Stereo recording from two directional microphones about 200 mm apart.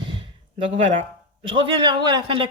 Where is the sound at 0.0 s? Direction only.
25° right (ahead or behind).